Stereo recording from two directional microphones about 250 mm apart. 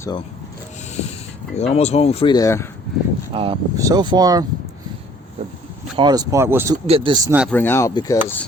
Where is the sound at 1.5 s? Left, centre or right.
Left; by 2.7 s centre.